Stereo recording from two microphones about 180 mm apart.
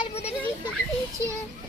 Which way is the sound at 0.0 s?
35° left (ahead or behind).